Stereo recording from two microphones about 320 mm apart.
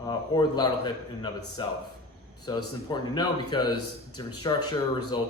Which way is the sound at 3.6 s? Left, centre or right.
Left.